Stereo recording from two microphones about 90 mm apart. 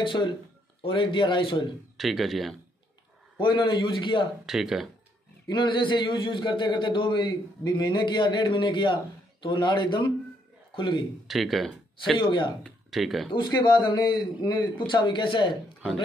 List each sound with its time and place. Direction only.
0.8 s a man's voice: 65° left (ahead or behind)
2.0 s speech: centre (ahead or behind)
3.3 s a man's voice: 65° left (ahead or behind)
4.5 s speech: 5° right (ahead or behind)
5.5 s a man's voice: 60° left (ahead or behind)
11.2 s speech: centre (ahead or behind)
12.2 s a man's voice: 60° left (ahead or behind)
12.6 s speech: centre (ahead or behind)
13.3 s a man's voice: 60° left (ahead or behind)